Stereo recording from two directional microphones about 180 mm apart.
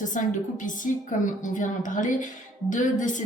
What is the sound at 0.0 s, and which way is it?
Speech, 45° left (ahead or behind).